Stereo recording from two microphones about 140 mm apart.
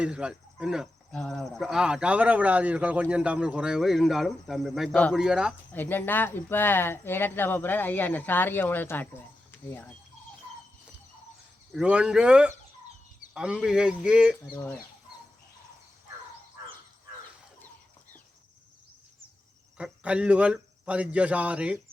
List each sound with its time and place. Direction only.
0.0 s speech: 5° right (ahead or behind)
5.7 s speech: 15° left (ahead or behind)
11.7 s speech: 5° right (ahead or behind)
19.7 s a man's voice: 10° right (ahead or behind)